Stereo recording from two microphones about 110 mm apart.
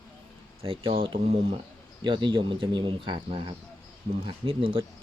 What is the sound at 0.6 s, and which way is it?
Speech, 55° right (ahead or behind).